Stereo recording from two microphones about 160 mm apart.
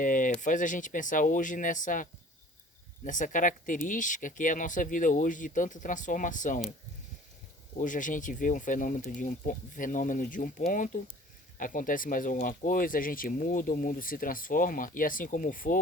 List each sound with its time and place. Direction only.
0.0 s a sound: 55° left (ahead or behind)
0.3 s speech: 55° left (ahead or behind)
7.8 s speech: 55° left (ahead or behind)